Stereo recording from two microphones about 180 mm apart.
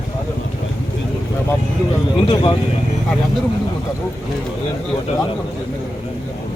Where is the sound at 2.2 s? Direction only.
25° left (ahead or behind).